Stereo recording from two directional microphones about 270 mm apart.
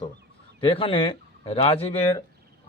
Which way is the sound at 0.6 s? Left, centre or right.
Centre.